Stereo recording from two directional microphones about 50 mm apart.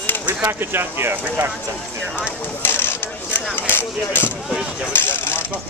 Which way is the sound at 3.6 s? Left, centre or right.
Left.